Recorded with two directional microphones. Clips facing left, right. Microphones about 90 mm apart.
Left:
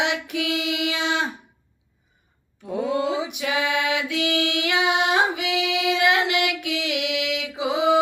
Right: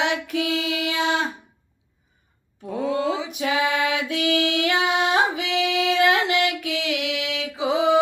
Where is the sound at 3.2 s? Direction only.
35° right (ahead or behind).